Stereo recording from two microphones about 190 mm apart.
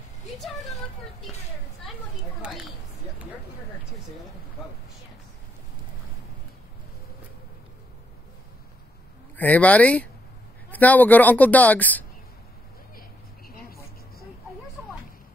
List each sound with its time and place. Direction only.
0.4 s speech: centre (ahead or behind)
9.4 s a woman's voice: 10° left (ahead or behind)
13.5 s a sound: 50° left (ahead or behind)